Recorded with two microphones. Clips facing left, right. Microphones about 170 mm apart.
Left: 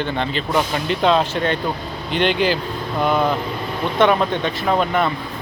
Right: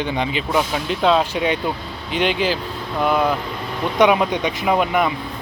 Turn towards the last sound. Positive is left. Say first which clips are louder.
# even
turn(degrees=-10)  # may be behind; listen again after turning